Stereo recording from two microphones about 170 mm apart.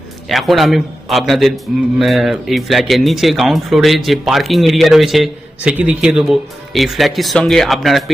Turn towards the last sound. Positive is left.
turn(degrees=0)  # may be behind; listen again after turning